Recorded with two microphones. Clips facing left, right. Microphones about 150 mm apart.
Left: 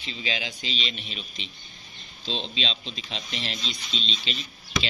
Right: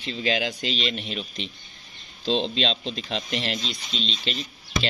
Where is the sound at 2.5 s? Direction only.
60° right (ahead or behind).